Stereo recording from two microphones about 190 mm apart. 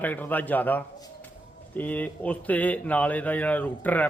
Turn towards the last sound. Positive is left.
turn(degrees=10)  # may be behind; listen again after turning